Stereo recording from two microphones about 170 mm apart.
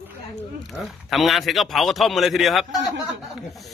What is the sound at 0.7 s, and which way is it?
Speech, centre (ahead or behind).